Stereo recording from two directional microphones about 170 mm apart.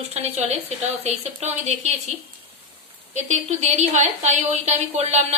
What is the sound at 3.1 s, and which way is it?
A woman's voice, 45° right (ahead or behind).